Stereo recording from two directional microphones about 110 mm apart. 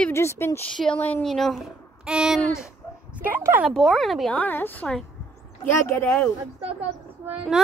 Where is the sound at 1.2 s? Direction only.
Centre (ahead or behind).